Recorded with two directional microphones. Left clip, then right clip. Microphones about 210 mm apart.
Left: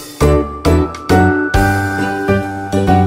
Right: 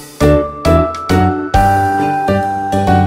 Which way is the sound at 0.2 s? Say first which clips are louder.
Right 2 dB; centre (ahead or behind).